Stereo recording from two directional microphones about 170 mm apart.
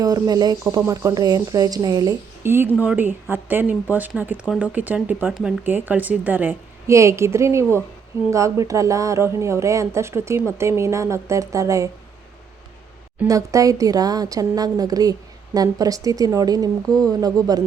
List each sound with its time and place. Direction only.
0.0 s speech: 20° right (ahead or behind)
13.2 s a woman's voice: 20° right (ahead or behind)